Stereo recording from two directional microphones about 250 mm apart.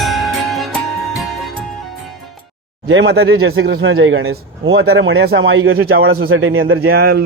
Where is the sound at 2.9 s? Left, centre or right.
Right.